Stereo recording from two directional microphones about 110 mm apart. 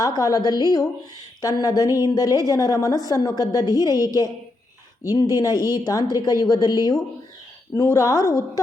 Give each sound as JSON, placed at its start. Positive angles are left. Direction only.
{"t": 0.0, "sound": "speech", "side_deg": 35}